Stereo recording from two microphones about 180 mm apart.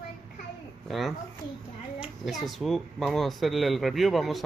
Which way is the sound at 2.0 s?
Centre (ahead or behind).